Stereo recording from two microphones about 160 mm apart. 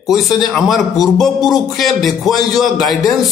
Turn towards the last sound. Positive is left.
turn(degrees=0)  # may be behind; listen again after turning